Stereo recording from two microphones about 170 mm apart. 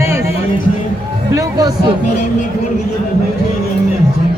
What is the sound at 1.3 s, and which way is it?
Music, 20° right (ahead or behind).